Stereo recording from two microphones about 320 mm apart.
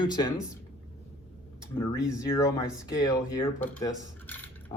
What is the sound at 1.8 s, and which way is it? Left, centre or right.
Speech, centre.